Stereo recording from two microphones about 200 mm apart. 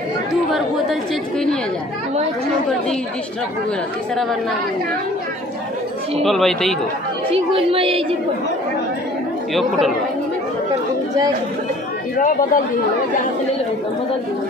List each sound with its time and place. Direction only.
4.1 s speech: centre (ahead or behind)
6.2 s speech: centre (ahead or behind)
7.2 s speech: 30° right (ahead or behind)
9.5 s speech: centre (ahead or behind)